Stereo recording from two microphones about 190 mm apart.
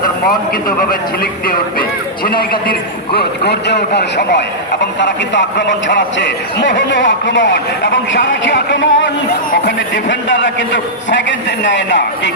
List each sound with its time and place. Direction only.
0.8 s a man's voice: 50° left (ahead or behind); by 12.3 s 70° left (ahead or behind)